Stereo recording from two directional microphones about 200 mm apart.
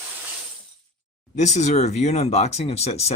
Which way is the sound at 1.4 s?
35° left (ahead or behind).